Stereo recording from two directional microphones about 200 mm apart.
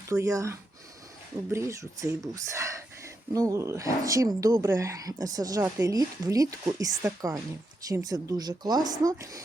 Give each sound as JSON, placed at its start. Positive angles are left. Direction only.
{"t": 0.1, "sound": "speech", "side_deg": -15}